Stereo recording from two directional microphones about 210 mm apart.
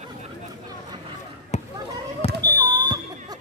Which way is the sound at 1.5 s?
30° left (ahead or behind).